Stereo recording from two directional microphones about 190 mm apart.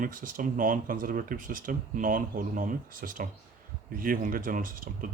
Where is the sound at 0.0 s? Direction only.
45° right (ahead or behind).